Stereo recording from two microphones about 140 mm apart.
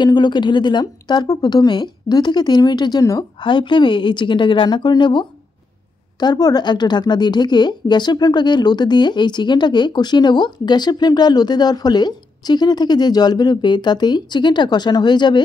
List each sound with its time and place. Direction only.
0.0 s a woman's voice: 30° left (ahead or behind)